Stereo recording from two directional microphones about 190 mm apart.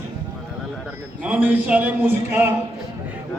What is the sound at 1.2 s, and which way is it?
A man's voice, 10° right (ahead or behind).